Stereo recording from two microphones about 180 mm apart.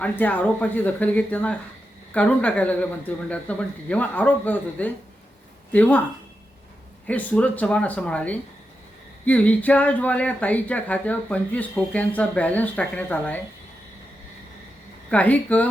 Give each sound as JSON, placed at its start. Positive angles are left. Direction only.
{"t": 0.0, "sound": "speech", "side_deg": 10}
{"t": 7.1, "sound": "speech", "side_deg": 10}
{"t": 15.1, "sound": "speech", "side_deg": 10}